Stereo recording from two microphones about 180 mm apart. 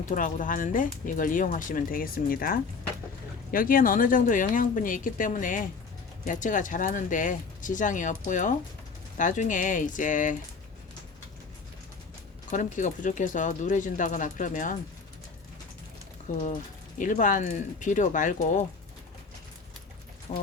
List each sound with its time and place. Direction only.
0.1 s speech: 45° left (ahead or behind)
12.5 s speech: 45° left (ahead or behind)
16.3 s speech: 45° left (ahead or behind)
20.3 s speech: 35° left (ahead or behind)